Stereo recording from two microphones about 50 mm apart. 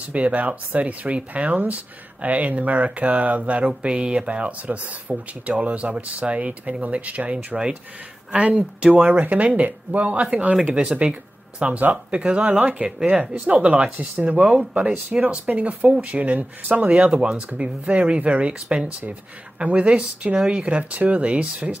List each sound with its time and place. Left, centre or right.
0.1 s speech: right
11.8 s speech: right
12.2 s speech: centre
12.4 s speech: right
14.4 s speech: centre
15.0 s speech: right
20.3 s speech: centre
20.7 s speech: right